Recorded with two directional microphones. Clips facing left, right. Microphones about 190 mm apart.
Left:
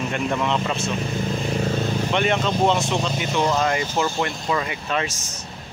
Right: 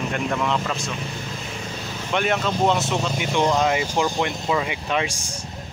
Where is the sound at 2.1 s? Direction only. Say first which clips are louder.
Right 1 dB; 5° right (ahead or behind).